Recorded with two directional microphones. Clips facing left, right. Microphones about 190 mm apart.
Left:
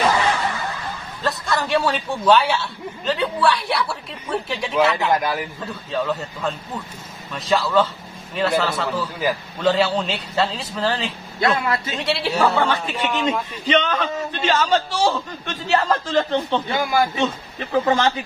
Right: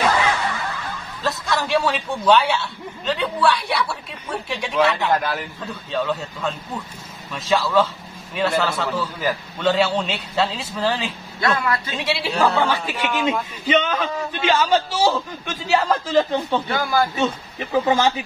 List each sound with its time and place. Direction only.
1.2 s a man's voice: centre (ahead or behind)
11.4 s a man's voice: 25° left (ahead or behind)
12.0 s a man's voice: centre (ahead or behind)
12.3 s speech: 10° left (ahead or behind)
12.5 s a man's voice: 5° right (ahead or behind)
16.7 s a man's voice: 20° left (ahead or behind)
17.8 s a man's voice: 10° right (ahead or behind)